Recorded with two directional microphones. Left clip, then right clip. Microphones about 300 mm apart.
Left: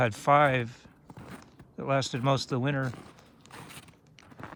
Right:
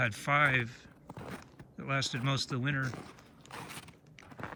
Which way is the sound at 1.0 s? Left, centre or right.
Centre.